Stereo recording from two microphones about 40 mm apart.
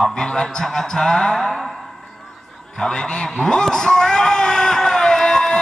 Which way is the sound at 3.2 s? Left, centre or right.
Centre.